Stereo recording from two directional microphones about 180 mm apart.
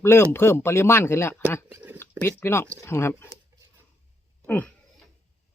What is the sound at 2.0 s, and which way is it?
Speech, 15° left (ahead or behind).